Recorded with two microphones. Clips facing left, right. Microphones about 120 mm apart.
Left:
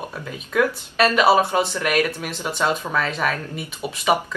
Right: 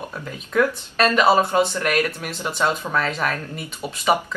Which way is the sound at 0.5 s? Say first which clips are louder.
Even; 5° left (ahead or behind).